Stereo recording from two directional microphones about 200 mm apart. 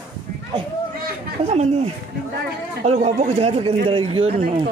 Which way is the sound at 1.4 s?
30° right (ahead or behind).